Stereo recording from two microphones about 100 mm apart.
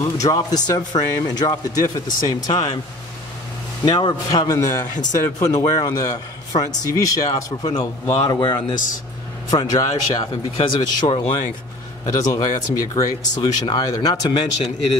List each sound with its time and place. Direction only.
0.0 s a man's voice: 35° left (ahead or behind)
3.8 s a man's voice: 45° left (ahead or behind)
12.1 s a man's voice: 40° left (ahead or behind)